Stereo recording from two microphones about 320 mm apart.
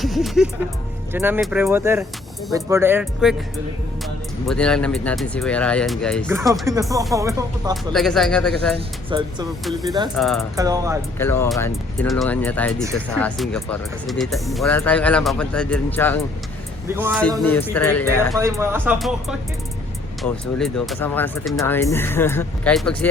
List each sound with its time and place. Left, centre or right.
0.0 s speech: centre
4.4 s speech: centre
7.9 s speech: centre
9.0 s speech: centre
10.2 s speech: centre
10.6 s speech: centre
11.2 s speech: centre
16.9 s speech: centre
17.5 s speech: centre
18.3 s speech: centre